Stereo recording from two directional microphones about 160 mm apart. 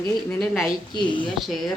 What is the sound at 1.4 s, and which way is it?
Speech, centre (ahead or behind).